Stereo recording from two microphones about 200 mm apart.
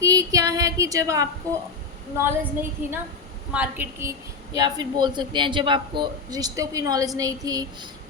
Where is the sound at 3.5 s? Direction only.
10° right (ahead or behind).